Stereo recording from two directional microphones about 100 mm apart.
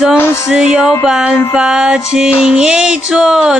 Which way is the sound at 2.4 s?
5° right (ahead or behind).